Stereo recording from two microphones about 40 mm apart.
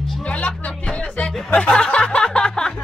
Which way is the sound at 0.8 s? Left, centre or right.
Left.